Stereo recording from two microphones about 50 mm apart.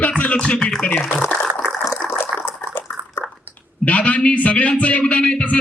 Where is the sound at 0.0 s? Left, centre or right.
Left.